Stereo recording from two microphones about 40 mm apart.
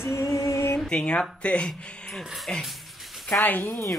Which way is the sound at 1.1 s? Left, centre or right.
Left.